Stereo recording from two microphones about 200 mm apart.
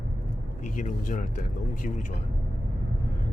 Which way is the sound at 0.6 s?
40° left (ahead or behind).